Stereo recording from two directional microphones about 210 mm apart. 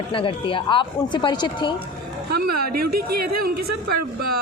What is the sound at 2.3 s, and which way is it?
Speech, 45° right (ahead or behind).